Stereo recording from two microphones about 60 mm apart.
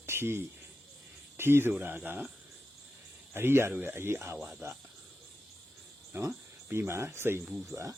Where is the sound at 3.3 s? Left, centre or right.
Right.